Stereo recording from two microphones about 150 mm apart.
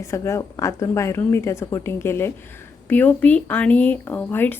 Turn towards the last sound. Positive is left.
turn(degrees=10)  # may be behind; listen again after turning